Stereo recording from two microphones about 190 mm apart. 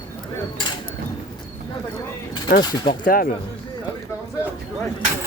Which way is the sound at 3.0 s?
50° left (ahead or behind).